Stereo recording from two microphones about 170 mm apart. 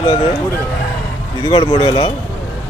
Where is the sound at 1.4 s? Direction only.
30° left (ahead or behind).